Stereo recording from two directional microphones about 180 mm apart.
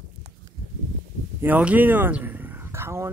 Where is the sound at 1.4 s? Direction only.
10° right (ahead or behind).